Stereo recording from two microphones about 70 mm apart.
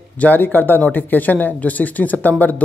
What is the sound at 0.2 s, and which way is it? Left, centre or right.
Speech, left.